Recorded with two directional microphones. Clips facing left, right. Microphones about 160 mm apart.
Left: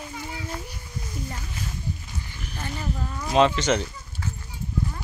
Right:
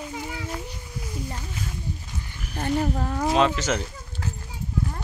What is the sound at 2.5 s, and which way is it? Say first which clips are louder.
Speech: right 8 dB; 55° right (ahead or behind).